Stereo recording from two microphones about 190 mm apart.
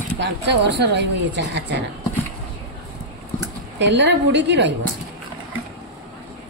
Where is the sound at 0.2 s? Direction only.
65° right (ahead or behind).